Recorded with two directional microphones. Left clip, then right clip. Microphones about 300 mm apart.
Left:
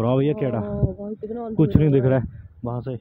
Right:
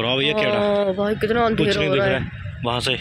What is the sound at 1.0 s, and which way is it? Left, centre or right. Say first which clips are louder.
Speech: right 12 dB; centre.